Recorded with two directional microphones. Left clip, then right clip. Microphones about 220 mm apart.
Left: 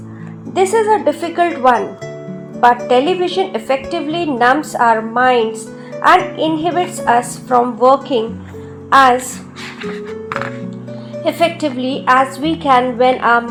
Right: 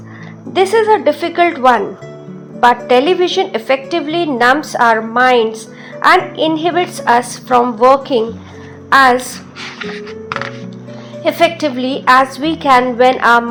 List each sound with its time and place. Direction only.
0.5 s a woman's voice: 20° right (ahead or behind)
2.8 s a woman's voice: 25° right (ahead or behind)
11.2 s a woman's voice: 20° right (ahead or behind)